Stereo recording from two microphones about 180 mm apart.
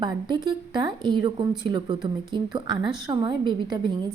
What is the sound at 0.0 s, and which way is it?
Speech, 25° right (ahead or behind).